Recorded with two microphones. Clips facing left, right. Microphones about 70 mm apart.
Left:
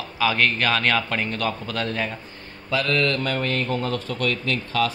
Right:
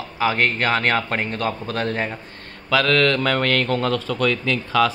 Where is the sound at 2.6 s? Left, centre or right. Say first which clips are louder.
Right 5 dB; right.